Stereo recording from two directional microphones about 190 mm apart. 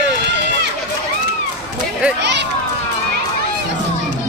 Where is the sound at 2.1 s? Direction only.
65° right (ahead or behind).